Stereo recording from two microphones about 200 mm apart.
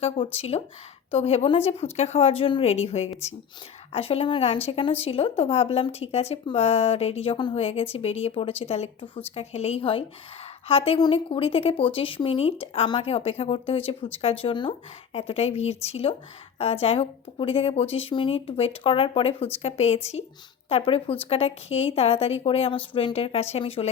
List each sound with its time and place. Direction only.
0.3 s speech: 30° left (ahead or behind)